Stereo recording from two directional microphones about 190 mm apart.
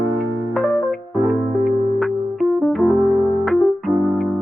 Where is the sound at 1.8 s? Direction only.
Centre (ahead or behind).